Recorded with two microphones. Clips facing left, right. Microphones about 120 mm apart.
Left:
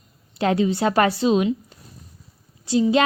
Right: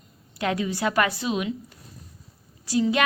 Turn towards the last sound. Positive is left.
turn(degrees=25)  # may be behind; listen again after turning